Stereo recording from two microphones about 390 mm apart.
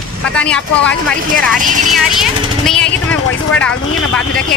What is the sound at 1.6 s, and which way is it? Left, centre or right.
Speech, centre.